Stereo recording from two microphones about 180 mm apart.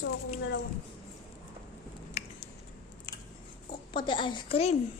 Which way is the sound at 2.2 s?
35° left (ahead or behind).